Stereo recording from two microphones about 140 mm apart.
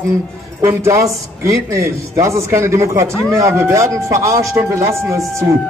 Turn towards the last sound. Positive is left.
turn(degrees=-25)  # may be behind; listen again after turning